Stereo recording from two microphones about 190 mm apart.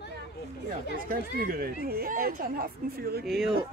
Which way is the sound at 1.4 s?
50° right (ahead or behind).